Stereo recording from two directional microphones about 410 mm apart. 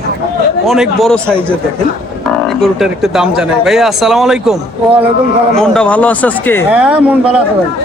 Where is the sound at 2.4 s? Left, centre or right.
Centre.